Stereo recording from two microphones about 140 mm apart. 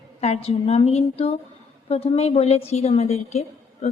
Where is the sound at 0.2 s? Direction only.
45° left (ahead or behind).